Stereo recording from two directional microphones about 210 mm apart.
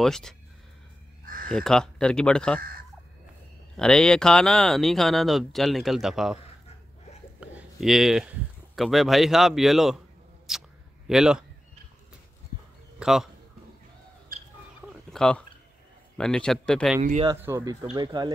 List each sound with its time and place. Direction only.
0.0 s speech: centre (ahead or behind)
1.2 s crow: 40° right (ahead or behind)
1.5 s speech: 5° left (ahead or behind)
3.7 s speech: 5° left (ahead or behind)
7.3 s a sound: 5° right (ahead or behind)
8.7 s speech: centre (ahead or behind)
13.0 s a man's voice: centre (ahead or behind)
14.3 s bird: 40° right (ahead or behind)
15.0 s a sound: 5° left (ahead or behind)
16.2 s speech: 5° left (ahead or behind)
17.4 s speech: 10° right (ahead or behind)